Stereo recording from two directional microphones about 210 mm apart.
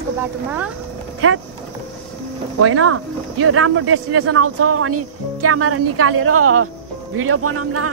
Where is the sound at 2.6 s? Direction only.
90° right.